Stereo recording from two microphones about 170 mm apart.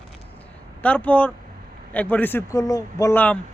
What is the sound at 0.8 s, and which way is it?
Speech, 10° left (ahead or behind).